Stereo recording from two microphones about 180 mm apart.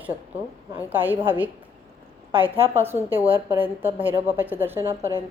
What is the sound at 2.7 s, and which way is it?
A woman's voice, 15° right (ahead or behind).